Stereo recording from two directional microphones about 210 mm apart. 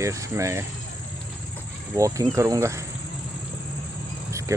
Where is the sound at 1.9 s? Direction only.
15° right (ahead or behind).